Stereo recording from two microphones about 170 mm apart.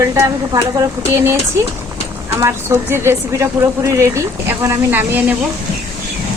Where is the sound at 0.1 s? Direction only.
20° right (ahead or behind).